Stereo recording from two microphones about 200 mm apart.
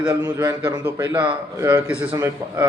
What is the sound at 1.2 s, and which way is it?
A man's voice, 25° right (ahead or behind).